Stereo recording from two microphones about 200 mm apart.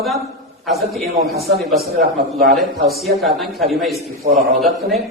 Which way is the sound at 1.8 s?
50° right (ahead or behind).